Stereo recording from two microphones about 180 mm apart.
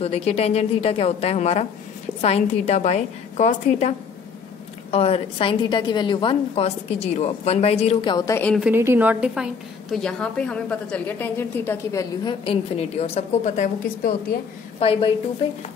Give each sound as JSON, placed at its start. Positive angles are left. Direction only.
{"t": 0.0, "sound": "a woman's voice", "side_deg": 35}
{"t": 4.9, "sound": "a woman's voice", "side_deg": 35}
{"t": 8.5, "sound": "a woman's voice", "side_deg": -10}
{"t": 12.4, "sound": "a woman's voice", "side_deg": 35}
{"t": 14.8, "sound": "a woman's voice", "side_deg": 30}